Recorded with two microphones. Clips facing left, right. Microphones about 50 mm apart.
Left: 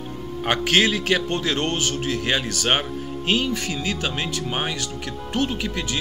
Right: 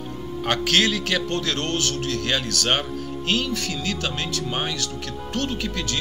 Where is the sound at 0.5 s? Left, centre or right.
Centre.